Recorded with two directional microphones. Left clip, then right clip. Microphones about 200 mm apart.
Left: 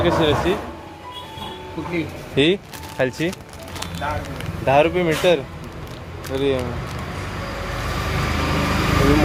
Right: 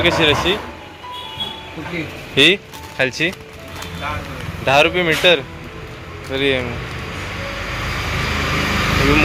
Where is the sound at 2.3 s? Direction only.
10° left (ahead or behind).